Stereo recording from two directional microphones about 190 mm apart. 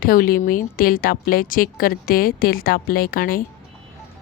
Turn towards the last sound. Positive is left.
turn(degrees=50)  # may be behind; listen again after turning